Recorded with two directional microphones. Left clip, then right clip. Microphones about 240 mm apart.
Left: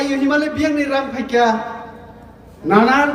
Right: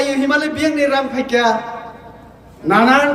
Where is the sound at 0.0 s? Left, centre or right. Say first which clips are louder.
Right 1 dB; centre.